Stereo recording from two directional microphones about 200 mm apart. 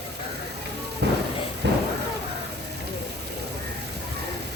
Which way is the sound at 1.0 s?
55° right (ahead or behind).